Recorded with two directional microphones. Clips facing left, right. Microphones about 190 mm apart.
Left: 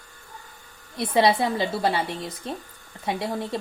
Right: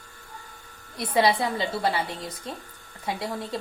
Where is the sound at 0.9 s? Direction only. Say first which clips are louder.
Left 2 dB; 25° left (ahead or behind).